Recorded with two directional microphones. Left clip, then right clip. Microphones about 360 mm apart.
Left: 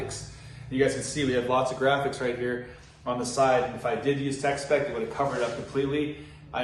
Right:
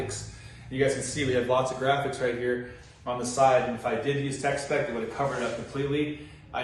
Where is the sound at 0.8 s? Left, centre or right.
Centre.